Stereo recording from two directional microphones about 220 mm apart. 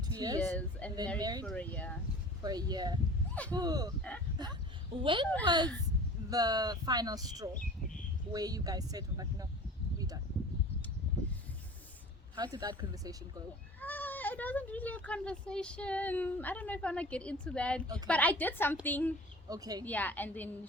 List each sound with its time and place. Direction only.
0.2 s speech: 15° right (ahead or behind)
0.4 s a woman's voice: 10° left (ahead or behind)
1.2 s speech: 15° right (ahead or behind)
1.5 s a woman's voice: 5° left (ahead or behind)
2.4 s speech: 15° right (ahead or behind)
12.4 s speech: 15° right (ahead or behind)
13.8 s speech: 10° left (ahead or behind)
17.8 s speech: 15° right (ahead or behind)
18.1 s a woman's voice: 5° left (ahead or behind)
19.5 s speech: 15° right (ahead or behind)
19.8 s a woman's voice: 5° left (ahead or behind)